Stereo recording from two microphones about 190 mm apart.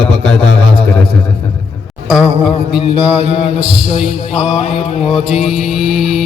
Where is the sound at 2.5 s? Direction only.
25° left (ahead or behind).